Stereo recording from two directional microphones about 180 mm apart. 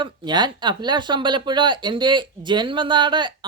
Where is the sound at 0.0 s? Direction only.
25° right (ahead or behind).